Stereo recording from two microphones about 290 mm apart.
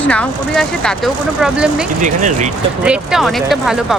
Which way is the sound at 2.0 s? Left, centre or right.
Right.